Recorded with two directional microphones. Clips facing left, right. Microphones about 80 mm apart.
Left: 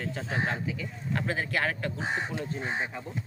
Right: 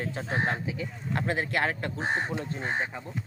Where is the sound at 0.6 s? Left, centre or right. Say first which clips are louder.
Right 1 dB; right.